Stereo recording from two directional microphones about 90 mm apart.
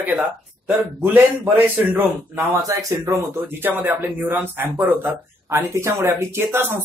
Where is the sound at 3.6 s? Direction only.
25° right (ahead or behind).